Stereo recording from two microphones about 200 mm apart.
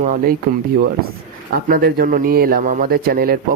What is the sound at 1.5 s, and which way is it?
A man's voice, 50° right (ahead or behind).